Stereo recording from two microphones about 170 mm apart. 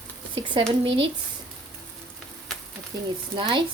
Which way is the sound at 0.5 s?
30° right (ahead or behind).